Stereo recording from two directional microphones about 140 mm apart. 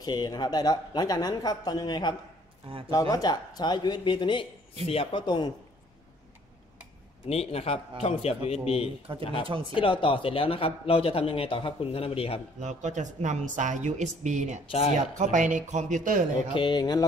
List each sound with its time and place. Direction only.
0.0 s a man's voice: 30° left (ahead or behind)
7.2 s speech: 45° left (ahead or behind)
9.2 s speech: 35° left (ahead or behind)
12.5 s a woman's voice: 60° right (ahead or behind)
16.5 s speech: 35° left (ahead or behind)